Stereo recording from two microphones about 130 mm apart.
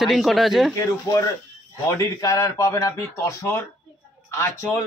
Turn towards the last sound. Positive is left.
turn(degrees=20)  # may be behind; listen again after turning